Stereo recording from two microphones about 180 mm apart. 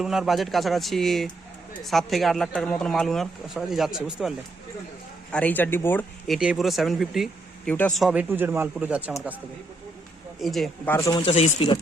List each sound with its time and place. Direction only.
0.0 s speech: centre (ahead or behind)
5.3 s speech: 10° left (ahead or behind)
6.3 s a man's voice: centre (ahead or behind)
10.4 s speech: centre (ahead or behind)
10.9 s speech: 15° left (ahead or behind)
11.3 s speech: 35° left (ahead or behind)